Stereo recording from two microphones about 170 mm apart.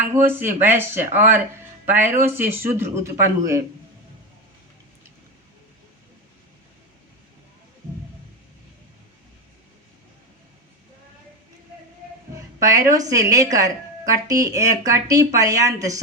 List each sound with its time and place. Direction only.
0.0 s a man's voice: 15° right (ahead or behind)
12.5 s a woman's voice: 20° right (ahead or behind)